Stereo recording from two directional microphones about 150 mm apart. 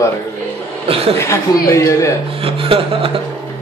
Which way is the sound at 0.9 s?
40° right (ahead or behind).